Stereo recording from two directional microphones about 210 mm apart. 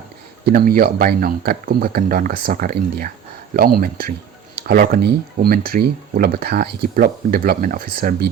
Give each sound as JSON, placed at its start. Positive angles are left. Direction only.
{"t": 0.4, "sound": "speech", "side_deg": -45}